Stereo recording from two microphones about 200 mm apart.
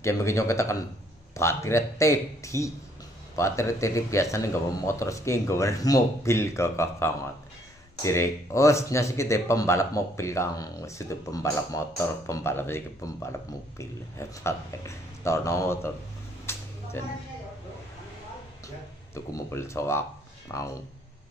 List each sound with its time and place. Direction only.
0.0 s a man's voice: 15° left (ahead or behind)
16.5 s a sound: 10° left (ahead or behind)
19.1 s a man's voice: 15° left (ahead or behind)